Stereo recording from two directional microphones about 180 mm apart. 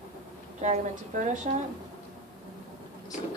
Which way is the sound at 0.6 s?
40° right (ahead or behind).